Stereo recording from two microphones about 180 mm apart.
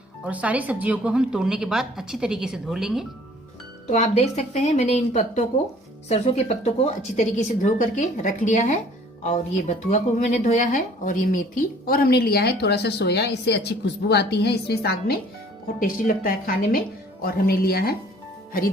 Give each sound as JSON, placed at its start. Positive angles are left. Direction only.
{"t": 0.3, "sound": "a woman's voice", "side_deg": -10}
{"t": 3.8, "sound": "a woman's voice", "side_deg": 40}
{"t": 11.9, "sound": "a woman's voice", "side_deg": 55}
{"t": 15.8, "sound": "speech", "side_deg": 50}